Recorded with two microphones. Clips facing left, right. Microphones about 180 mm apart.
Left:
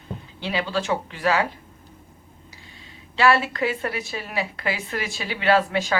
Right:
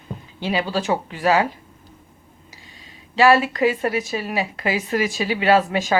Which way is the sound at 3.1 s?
15° right (ahead or behind).